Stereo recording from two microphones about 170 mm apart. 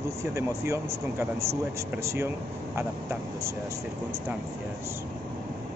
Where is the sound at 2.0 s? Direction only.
15° right (ahead or behind).